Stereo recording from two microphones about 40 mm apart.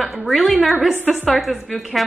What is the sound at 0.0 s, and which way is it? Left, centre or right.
Speech, centre.